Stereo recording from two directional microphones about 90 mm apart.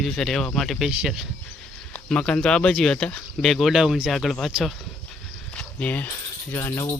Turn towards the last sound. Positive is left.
turn(degrees=30)  # may be behind; listen again after turning